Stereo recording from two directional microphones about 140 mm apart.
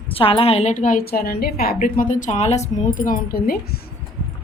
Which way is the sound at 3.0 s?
85° left.